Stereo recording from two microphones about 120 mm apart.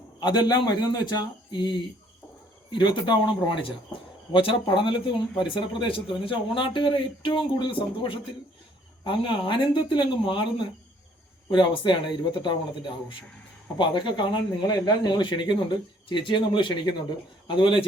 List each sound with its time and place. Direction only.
0.2 s speech: 35° left (ahead or behind)